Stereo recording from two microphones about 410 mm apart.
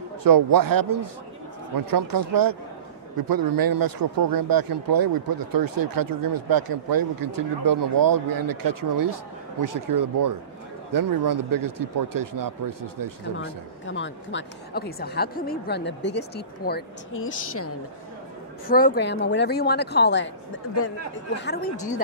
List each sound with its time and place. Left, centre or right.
0.2 s speech: right
13.8 s a woman's voice: left
18.7 s a woman's voice: left